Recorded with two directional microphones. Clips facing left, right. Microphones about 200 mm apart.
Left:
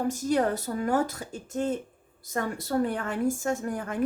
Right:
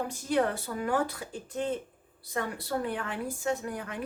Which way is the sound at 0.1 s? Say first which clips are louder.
Left 1 dB; 40° left (ahead or behind).